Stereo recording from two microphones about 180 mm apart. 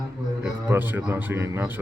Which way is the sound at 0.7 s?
10° right (ahead or behind).